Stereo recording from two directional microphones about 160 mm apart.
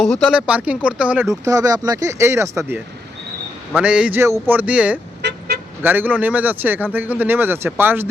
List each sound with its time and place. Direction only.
0.0 s speech: 5° right (ahead or behind)
1.3 s speech: 20° right (ahead or behind)
5.2 s vehicle: 90° right
5.8 s speech: 10° right (ahead or behind)